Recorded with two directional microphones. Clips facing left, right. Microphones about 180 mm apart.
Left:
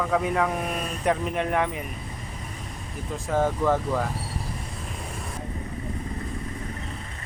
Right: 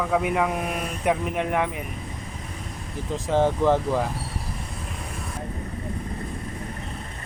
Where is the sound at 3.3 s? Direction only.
25° right (ahead or behind).